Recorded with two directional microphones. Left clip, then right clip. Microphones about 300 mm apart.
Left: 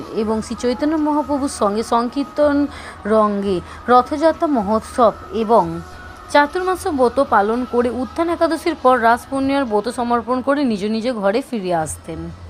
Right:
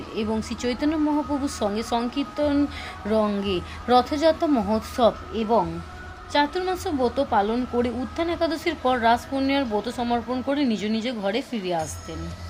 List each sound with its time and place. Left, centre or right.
0.2 s speech: centre